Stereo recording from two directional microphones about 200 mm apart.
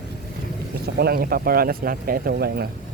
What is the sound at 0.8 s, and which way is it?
Speech, 50° right (ahead or behind).